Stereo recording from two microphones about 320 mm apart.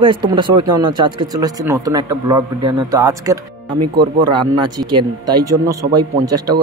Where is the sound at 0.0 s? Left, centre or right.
Centre.